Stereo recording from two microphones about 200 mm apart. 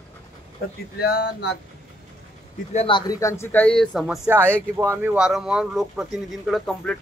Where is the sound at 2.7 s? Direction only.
25° left (ahead or behind); by 4.1 s centre (ahead or behind).